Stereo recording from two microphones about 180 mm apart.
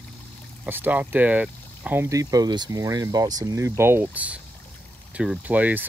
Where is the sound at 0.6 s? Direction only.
10° right (ahead or behind).